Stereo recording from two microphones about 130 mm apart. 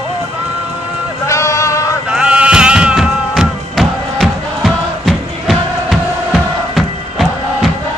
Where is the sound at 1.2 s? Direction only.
25° left (ahead or behind).